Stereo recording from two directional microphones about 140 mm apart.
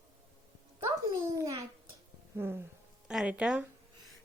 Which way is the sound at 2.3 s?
15° right (ahead or behind).